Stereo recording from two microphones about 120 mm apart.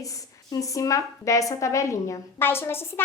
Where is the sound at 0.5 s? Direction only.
25° left (ahead or behind).